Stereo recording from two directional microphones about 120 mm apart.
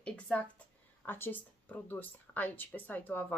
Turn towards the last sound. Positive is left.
turn(degrees=15)  # may be behind; listen again after turning